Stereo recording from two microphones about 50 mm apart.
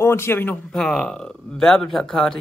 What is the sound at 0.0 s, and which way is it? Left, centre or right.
Speech, left.